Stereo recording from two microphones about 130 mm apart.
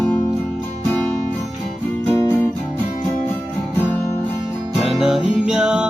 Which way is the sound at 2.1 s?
20° left (ahead or behind).